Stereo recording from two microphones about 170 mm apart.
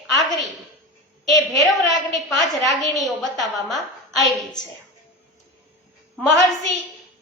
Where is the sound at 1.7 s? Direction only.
Centre (ahead or behind).